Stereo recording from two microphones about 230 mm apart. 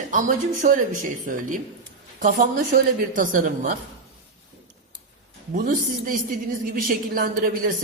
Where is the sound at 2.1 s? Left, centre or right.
Right.